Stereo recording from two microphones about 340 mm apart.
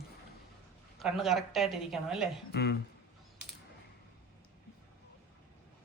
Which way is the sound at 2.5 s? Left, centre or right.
Left.